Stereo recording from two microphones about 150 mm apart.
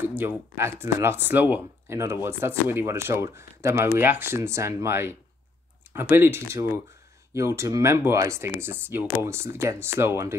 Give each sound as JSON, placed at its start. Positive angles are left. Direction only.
{"t": 0.0, "sound": "speech", "side_deg": -15}